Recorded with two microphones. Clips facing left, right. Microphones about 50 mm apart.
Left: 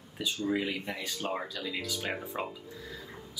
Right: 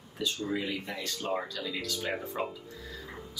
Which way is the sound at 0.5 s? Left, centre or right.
Centre.